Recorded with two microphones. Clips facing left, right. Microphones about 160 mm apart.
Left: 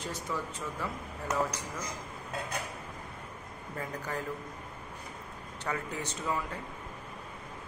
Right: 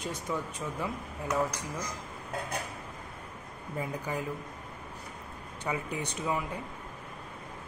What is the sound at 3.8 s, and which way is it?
Speech, 15° right (ahead or behind).